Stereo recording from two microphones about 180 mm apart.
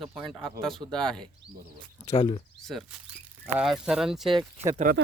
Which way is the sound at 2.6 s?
Centre (ahead or behind).